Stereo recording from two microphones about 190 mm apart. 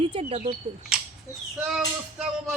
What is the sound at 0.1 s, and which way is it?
Speech, 30° right (ahead or behind).